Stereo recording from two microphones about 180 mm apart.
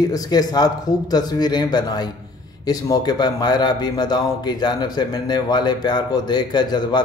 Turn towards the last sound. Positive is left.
turn(degrees=25)  # may be behind; listen again after turning